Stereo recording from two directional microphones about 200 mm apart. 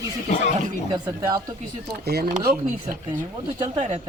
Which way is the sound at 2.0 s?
50° right (ahead or behind).